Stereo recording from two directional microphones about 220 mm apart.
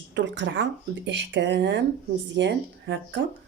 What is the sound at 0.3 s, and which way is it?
Speech, 55° right (ahead or behind).